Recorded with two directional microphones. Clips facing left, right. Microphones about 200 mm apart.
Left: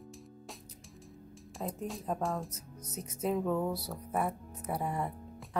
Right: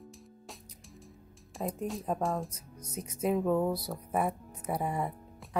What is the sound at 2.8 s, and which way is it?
Speech, 10° right (ahead or behind).